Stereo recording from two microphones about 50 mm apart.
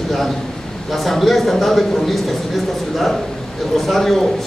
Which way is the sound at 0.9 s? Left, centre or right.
Centre.